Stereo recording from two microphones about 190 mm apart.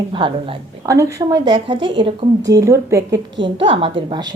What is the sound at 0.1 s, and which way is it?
A woman's voice, 25° right (ahead or behind).